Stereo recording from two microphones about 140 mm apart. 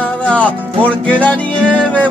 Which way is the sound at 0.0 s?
10° left (ahead or behind).